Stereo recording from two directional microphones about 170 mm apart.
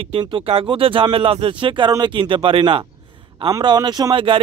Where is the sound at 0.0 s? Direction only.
30° right (ahead or behind).